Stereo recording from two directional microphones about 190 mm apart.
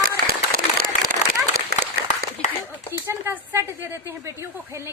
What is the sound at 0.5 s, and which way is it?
Applause, 50° right (ahead or behind).